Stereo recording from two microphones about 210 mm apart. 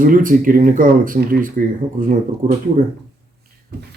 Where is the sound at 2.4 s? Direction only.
25° right (ahead or behind).